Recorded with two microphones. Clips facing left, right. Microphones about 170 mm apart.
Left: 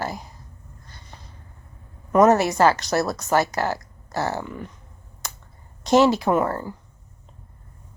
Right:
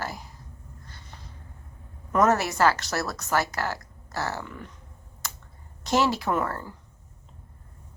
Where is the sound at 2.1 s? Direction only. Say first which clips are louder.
Left 6 dB; 20° left (ahead or behind).